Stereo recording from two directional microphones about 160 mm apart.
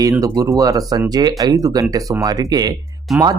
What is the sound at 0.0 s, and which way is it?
Speech, 20° right (ahead or behind).